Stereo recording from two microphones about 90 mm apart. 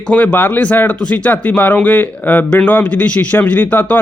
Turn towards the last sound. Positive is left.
turn(degrees=15)  # may be behind; listen again after turning